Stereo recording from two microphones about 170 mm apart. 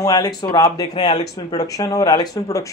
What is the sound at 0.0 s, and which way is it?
Speech, 20° left (ahead or behind).